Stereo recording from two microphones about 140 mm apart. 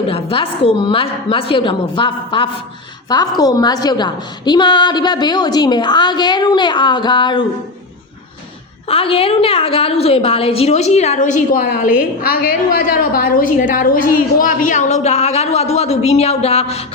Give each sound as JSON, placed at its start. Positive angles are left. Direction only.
{"t": 0.1, "sound": "a woman's voice", "side_deg": 40}
{"t": 8.9, "sound": "a woman's voice", "side_deg": 40}